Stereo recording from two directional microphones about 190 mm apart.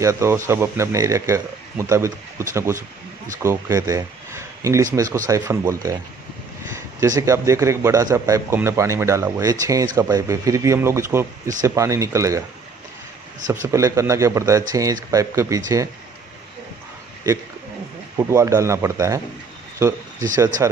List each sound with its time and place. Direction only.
0.0 s a man's voice: 15° right (ahead or behind)
13.7 s a man's voice: 15° right (ahead or behind)
18.1 s a man's voice: 15° right (ahead or behind)
20.3 s speech: 20° right (ahead or behind)